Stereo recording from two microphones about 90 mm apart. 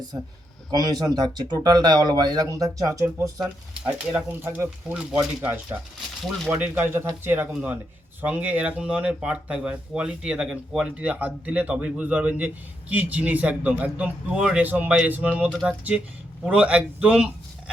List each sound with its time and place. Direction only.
0.7 s speech: 45° right (ahead or behind)
3.8 s speech: 25° right (ahead or behind)